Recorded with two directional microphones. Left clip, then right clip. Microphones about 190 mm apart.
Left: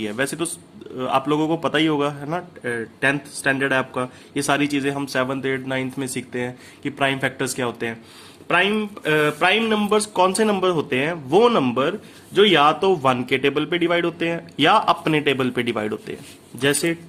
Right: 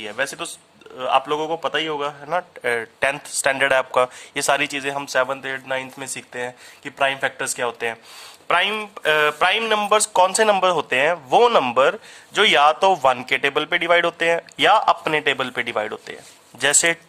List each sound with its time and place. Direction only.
0.0 s a man's voice: 15° right (ahead or behind)
2.6 s speech: 40° right (ahead or behind)
8.4 s speech: 35° right (ahead or behind); by 16.1 s 20° right (ahead or behind)
16.6 s speech: 35° right (ahead or behind)